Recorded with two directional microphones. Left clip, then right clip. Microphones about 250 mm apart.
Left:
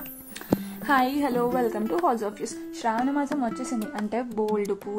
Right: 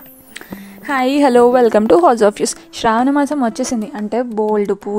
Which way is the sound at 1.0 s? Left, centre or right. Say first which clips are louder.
Right 15 dB; right.